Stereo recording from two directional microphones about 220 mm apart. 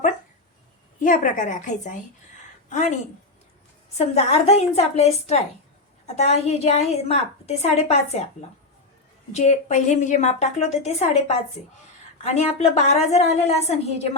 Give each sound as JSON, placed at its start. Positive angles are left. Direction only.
{"t": 0.9, "sound": "a woman's voice", "side_deg": 35}
{"t": 3.9, "sound": "a woman's voice", "side_deg": 30}